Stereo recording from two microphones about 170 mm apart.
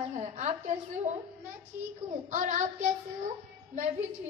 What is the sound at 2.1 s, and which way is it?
Speech, 45° right (ahead or behind).